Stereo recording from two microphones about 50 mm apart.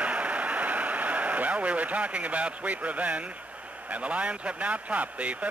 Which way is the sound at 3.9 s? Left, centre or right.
Right.